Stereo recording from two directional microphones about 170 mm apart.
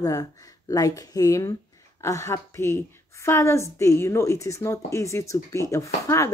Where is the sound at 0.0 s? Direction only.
20° left (ahead or behind).